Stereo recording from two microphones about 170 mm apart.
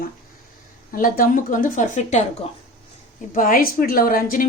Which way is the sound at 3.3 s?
55° left (ahead or behind).